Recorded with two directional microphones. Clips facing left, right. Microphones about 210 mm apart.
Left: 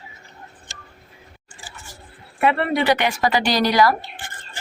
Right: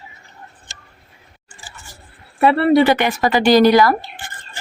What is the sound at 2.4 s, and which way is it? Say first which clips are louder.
Speech: right 6 dB; 40° right (ahead or behind).